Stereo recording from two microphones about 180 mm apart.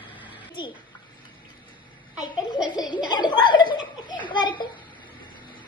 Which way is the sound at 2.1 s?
5° right (ahead or behind).